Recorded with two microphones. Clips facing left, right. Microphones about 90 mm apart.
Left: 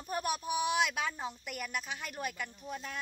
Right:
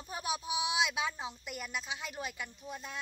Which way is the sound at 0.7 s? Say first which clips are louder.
Even; 15° right (ahead or behind).